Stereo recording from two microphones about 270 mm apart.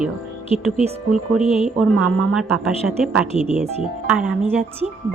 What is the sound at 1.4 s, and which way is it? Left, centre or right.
Speech, left.